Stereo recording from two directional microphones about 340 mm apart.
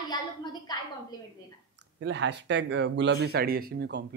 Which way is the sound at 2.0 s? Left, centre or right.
Right.